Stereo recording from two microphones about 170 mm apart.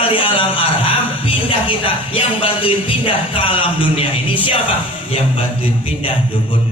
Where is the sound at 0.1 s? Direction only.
30° left (ahead or behind).